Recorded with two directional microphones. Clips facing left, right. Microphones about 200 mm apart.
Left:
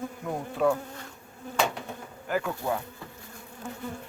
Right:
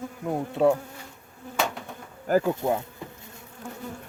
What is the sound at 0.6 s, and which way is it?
Bee, 25° right (ahead or behind).